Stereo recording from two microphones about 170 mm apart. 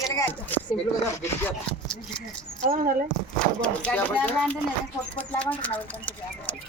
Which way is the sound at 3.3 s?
5° left (ahead or behind).